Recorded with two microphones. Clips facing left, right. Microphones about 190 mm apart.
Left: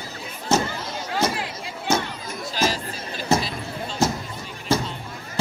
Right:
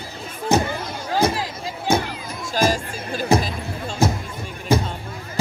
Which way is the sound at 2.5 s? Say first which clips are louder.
Right 5 dB; 50° right (ahead or behind).